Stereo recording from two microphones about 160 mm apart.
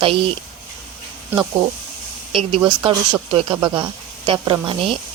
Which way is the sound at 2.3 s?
30° right (ahead or behind).